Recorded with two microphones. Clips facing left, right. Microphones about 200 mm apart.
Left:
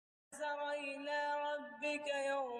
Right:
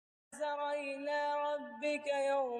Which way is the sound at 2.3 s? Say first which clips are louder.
Right 6 dB; 45° right (ahead or behind).